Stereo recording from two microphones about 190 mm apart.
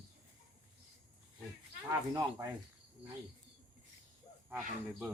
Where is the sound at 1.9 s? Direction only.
20° right (ahead or behind).